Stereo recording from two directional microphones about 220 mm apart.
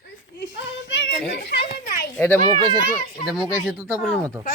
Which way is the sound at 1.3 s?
50° left (ahead or behind).